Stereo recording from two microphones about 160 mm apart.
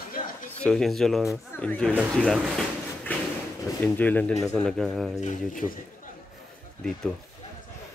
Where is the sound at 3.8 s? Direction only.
10° left (ahead or behind).